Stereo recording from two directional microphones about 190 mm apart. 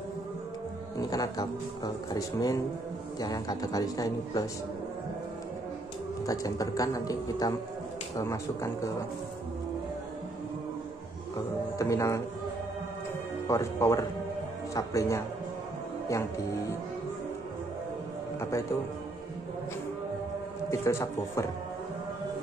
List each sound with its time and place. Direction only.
1.1 s a man's voice: 20° left (ahead or behind)
6.2 s a man's voice: 20° left (ahead or behind)
11.8 s a man's voice: 15° left (ahead or behind)
13.5 s a man's voice: 15° left (ahead or behind)
20.7 s a man's voice: 15° left (ahead or behind)